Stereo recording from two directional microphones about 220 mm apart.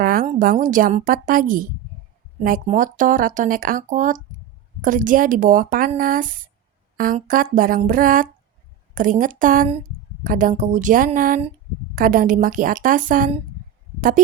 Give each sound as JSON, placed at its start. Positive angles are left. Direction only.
{"t": 0.0, "sound": "speech", "side_deg": -40}